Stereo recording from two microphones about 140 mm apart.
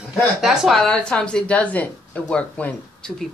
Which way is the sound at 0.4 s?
Centre (ahead or behind).